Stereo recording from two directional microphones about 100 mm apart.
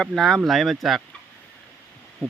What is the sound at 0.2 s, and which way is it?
Speech, 5° left (ahead or behind).